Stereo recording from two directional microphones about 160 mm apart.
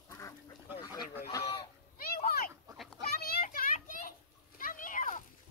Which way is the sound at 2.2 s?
70° left (ahead or behind).